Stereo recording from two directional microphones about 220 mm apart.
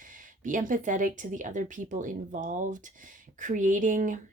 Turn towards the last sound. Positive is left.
turn(degrees=-35)  # may be behind; listen again after turning